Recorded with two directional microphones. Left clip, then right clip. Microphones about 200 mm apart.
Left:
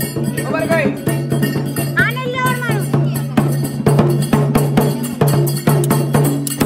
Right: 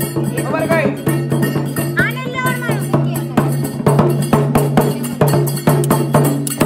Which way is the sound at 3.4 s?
15° right (ahead or behind).